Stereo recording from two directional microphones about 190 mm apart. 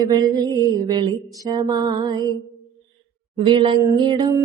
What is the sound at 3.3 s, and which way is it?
Female singing, 25° right (ahead or behind).